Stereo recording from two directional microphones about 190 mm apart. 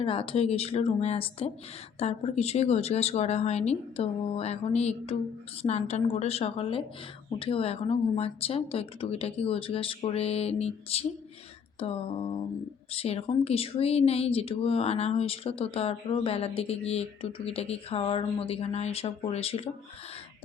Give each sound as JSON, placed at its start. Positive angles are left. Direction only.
{"t": 0.0, "sound": "speech", "side_deg": 30}
{"t": 11.8, "sound": "a sound", "side_deg": 30}
{"t": 12.9, "sound": "speech", "side_deg": 30}